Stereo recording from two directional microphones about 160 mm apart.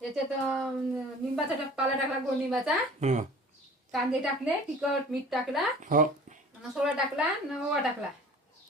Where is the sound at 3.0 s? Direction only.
45° right (ahead or behind).